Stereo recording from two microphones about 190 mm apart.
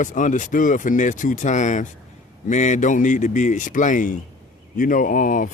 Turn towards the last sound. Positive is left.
turn(degrees=45)  # may be behind; listen again after turning